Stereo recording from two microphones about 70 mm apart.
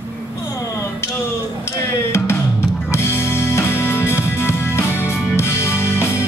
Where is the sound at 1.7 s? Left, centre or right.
Left.